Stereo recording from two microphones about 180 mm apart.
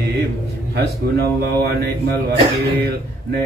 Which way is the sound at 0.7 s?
65° right (ahead or behind).